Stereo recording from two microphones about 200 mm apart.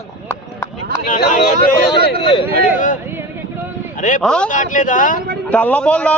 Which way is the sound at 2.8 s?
40° left (ahead or behind).